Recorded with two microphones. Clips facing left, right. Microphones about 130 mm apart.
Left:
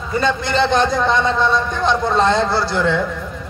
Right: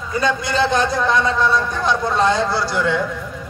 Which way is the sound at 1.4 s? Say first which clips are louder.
Left 1 dB; 25° left (ahead or behind).